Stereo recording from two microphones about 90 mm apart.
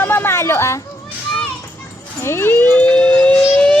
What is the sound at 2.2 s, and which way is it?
Speech, 30° left (ahead or behind).